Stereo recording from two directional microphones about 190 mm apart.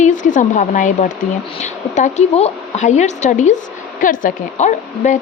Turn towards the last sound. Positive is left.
turn(degrees=40)  # may be behind; listen again after turning